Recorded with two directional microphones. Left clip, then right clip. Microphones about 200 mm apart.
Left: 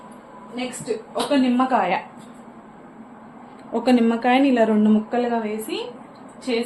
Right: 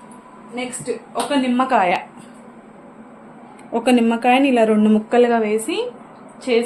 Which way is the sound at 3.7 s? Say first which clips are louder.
Right 2 dB; 20° right (ahead or behind).